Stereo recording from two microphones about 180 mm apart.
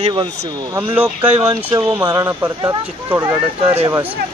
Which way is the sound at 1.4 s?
15° right (ahead or behind).